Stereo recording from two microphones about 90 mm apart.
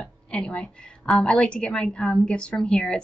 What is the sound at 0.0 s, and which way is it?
A woman's voice, 10° left (ahead or behind).